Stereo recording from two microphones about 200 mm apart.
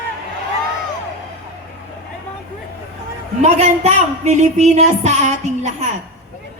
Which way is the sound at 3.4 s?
35° right (ahead or behind).